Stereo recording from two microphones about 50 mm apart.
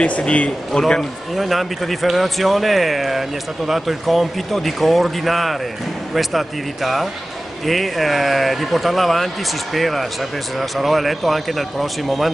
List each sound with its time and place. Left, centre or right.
0.0 s speech: left
0.7 s speech: centre
1.3 s speech: centre